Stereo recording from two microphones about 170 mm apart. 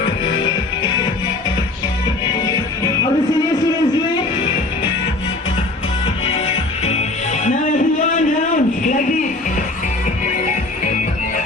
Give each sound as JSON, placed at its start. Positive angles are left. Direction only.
{"t": 2.5, "sound": "music", "side_deg": 20}
{"t": 6.4, "sound": "music", "side_deg": 40}
{"t": 8.1, "sound": "a sound", "side_deg": 50}